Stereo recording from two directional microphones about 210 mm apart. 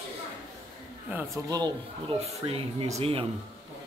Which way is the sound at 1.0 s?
10° right (ahead or behind).